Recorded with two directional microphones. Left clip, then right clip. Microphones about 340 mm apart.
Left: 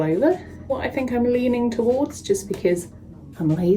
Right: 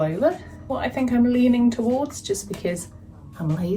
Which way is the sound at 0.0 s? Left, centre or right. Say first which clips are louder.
Left 2 dB; centre.